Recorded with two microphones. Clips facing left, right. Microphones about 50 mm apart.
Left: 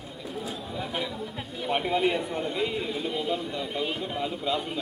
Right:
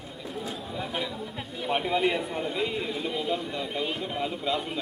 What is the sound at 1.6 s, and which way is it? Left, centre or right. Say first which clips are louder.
A man's voice: even; centre.